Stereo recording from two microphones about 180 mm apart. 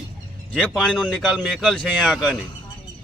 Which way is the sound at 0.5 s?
5° left (ahead or behind).